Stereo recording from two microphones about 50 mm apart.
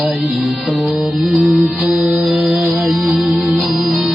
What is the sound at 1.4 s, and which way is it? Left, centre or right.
Music, right.